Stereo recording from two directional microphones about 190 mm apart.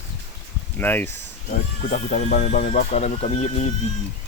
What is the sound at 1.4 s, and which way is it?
Speech, 40° left (ahead or behind).